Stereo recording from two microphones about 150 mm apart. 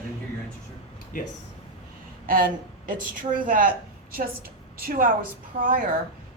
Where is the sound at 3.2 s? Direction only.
65° right (ahead or behind).